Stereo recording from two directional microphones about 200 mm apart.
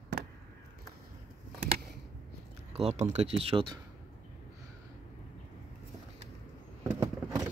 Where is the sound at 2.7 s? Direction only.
30° right (ahead or behind).